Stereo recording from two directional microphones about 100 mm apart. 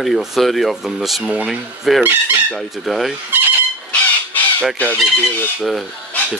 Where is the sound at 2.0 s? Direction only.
15° right (ahead or behind).